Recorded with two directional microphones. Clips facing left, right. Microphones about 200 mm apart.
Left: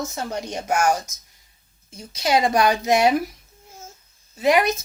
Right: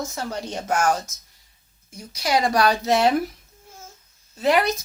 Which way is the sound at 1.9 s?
25° left (ahead or behind).